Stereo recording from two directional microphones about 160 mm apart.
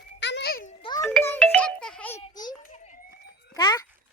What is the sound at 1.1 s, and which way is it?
Music, 10° left (ahead or behind).